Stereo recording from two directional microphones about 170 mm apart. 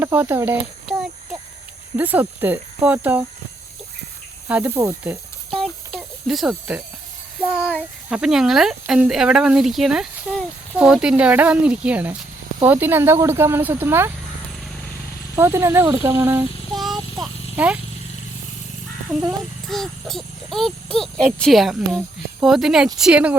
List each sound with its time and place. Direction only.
0.0 s a sound: 10° right (ahead or behind)
2.0 s speech: 10° right (ahead or behind)
4.4 s speech: 10° right (ahead or behind)
5.5 s a sound: centre (ahead or behind)
7.4 s speech: 5° right (ahead or behind)
15.4 s speech: 15° right (ahead or behind)
16.7 s a sound: centre (ahead or behind)
17.6 s speech: 10° right (ahead or behind)
19.6 s speech: centre (ahead or behind)